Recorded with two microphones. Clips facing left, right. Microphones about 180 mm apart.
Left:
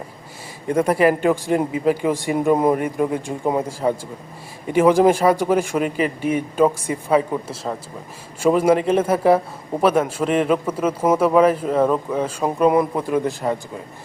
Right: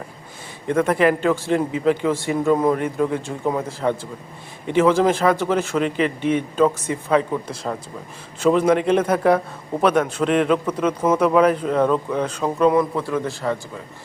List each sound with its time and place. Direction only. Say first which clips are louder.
0.7 s a man's voice: left 1 dB; 10° left (ahead or behind)